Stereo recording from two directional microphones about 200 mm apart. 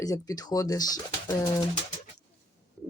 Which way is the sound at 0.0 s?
20° left (ahead or behind).